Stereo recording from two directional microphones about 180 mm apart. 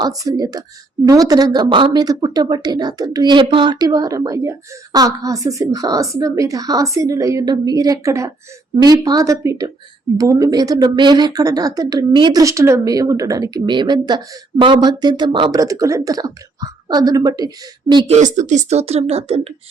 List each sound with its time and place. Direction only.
0.0 s a woman's voice: 20° right (ahead or behind)
18.3 s speech: 40° right (ahead or behind)